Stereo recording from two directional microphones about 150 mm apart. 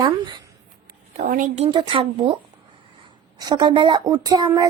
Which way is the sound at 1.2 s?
70° right (ahead or behind).